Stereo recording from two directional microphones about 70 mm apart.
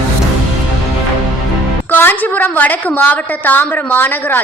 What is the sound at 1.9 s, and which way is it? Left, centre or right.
A woman's voice, left.